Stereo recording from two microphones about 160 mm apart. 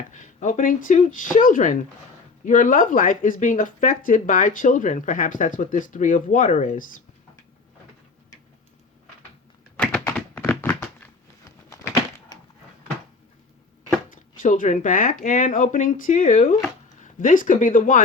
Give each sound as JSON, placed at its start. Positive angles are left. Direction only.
{"t": 0.1, "sound": "speech", "side_deg": 50}
{"t": 9.7, "sound": "thunk", "side_deg": 5}
{"t": 11.7, "sound": "a sound", "side_deg": 20}
{"t": 14.1, "sound": "speech", "side_deg": 55}